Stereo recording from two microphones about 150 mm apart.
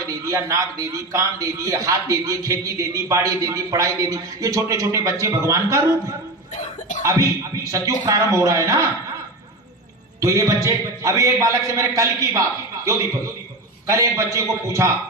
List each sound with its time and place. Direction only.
0.2 s a man's voice: 20° right (ahead or behind)
6.5 s cough: 55° left (ahead or behind)
7.0 s a man's voice: 20° right (ahead or behind)
10.2 s a man's voice: 20° right (ahead or behind)